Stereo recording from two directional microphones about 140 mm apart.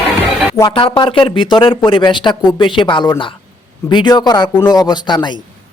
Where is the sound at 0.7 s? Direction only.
40° left (ahead or behind).